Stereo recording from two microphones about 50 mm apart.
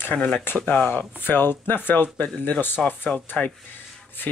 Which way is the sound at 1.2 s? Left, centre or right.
Left.